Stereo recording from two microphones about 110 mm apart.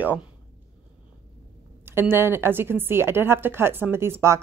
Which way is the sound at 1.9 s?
20° right (ahead or behind).